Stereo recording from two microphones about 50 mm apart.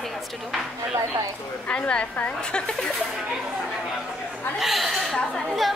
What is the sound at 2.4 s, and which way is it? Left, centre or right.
Speech, centre.